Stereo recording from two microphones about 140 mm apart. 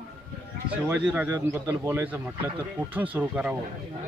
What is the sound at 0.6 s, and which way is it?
Speech, 10° right (ahead or behind).